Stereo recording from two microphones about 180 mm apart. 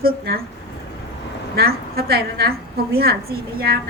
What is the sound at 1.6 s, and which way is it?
A woman's voice, 60° right (ahead or behind).